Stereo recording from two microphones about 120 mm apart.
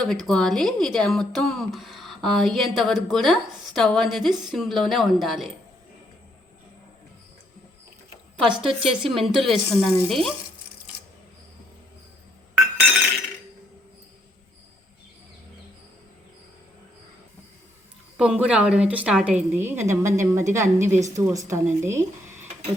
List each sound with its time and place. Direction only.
0.0 s speech: 5° left (ahead or behind)
8.4 s speech: centre (ahead or behind)
18.2 s a woman's voice: 5° right (ahead or behind)